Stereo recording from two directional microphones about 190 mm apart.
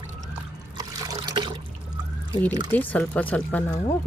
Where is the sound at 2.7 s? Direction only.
10° left (ahead or behind).